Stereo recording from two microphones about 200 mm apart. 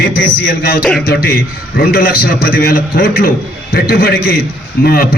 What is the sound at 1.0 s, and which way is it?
A man's voice, 50° left (ahead or behind).